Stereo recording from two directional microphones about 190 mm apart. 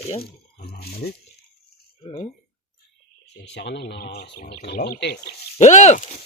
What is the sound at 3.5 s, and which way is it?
Speech, 65° left (ahead or behind).